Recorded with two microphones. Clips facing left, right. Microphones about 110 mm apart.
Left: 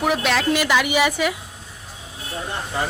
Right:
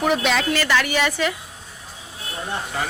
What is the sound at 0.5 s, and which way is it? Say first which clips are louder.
Speech: left 2 dB; 15° left (ahead or behind).